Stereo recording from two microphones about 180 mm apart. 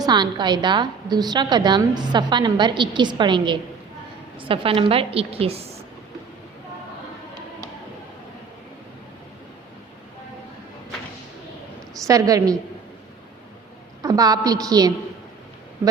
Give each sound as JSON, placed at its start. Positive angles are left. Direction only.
{"t": 0.0, "sound": "a woman's voice", "side_deg": -25}
{"t": 12.0, "sound": "a woman's voice", "side_deg": -20}
{"t": 14.0, "sound": "a woman's voice", "side_deg": -20}